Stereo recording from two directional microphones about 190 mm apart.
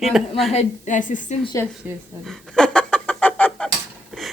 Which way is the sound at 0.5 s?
40° left (ahead or behind).